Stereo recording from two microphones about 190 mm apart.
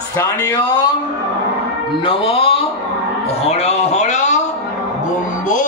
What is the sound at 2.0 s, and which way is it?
A man's voice, 30° left (ahead or behind).